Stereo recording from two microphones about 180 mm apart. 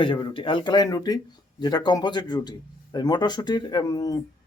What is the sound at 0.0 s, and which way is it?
Speech, 25° left (ahead or behind).